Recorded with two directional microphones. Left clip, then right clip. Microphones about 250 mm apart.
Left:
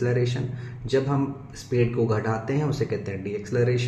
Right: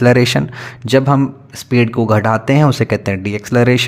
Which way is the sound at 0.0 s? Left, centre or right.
Right.